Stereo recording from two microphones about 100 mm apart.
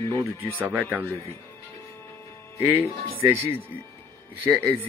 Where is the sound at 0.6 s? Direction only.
15° right (ahead or behind).